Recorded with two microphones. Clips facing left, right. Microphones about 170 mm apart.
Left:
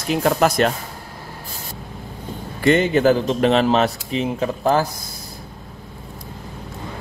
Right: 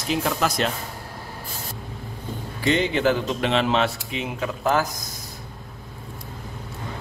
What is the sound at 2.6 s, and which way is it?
Speech, 50° left (ahead or behind).